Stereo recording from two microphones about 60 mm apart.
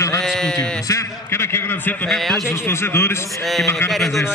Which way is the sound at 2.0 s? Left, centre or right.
Centre.